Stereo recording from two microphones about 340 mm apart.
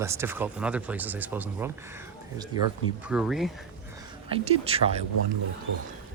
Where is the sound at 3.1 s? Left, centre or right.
Centre.